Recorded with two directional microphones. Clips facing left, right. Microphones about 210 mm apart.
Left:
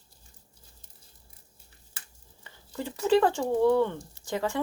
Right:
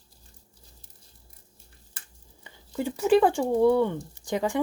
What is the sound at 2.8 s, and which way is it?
Speech, 15° right (ahead or behind).